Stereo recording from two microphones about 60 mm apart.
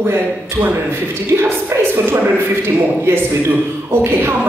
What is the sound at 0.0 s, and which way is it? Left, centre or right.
A man's voice, right.